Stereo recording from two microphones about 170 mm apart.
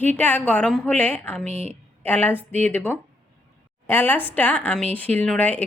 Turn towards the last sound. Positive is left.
turn(degrees=10)  # may be behind; listen again after turning